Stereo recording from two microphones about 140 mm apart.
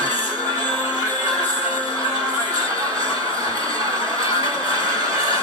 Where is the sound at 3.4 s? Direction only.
25° right (ahead or behind).